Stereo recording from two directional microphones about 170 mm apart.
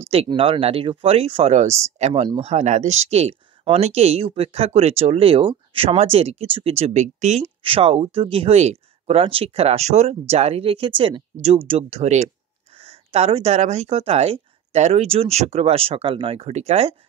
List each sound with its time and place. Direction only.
0.1 s speech: 35° right (ahead or behind)
2.2 s speech: 30° right (ahead or behind)
2.5 s speech: 45° right (ahead or behind)
7.4 s speech: 30° right (ahead or behind)